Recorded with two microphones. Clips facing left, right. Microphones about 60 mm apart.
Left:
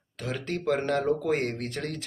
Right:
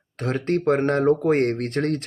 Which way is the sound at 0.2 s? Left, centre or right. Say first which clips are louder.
Right 9 dB; right.